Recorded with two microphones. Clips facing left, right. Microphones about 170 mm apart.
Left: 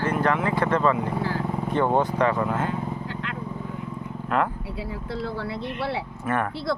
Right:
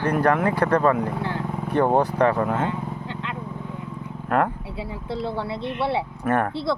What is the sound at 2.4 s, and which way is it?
Speech, 55° right (ahead or behind).